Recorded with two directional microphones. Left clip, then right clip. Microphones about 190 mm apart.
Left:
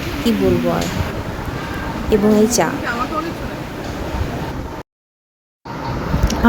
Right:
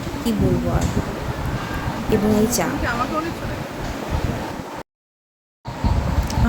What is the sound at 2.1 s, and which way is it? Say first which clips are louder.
Speech: left 5 dB; 30° left (ahead or behind).